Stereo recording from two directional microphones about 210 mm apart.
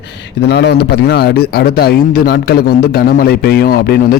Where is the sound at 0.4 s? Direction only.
55° left (ahead or behind).